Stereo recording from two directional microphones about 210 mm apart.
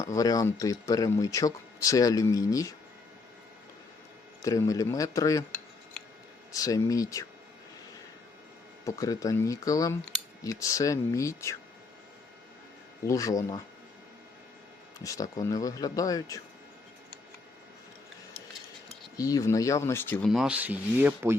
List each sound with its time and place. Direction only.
0.0 s speech: 15° left (ahead or behind)
4.4 s speech: 15° left (ahead or behind)
6.5 s speech: 15° left (ahead or behind)
8.8 s speech: 15° left (ahead or behind)
13.1 s speech: 15° left (ahead or behind)
15.0 s speech: 15° left (ahead or behind)
19.1 s speech: 15° left (ahead or behind)
20.3 s speech: 5° right (ahead or behind)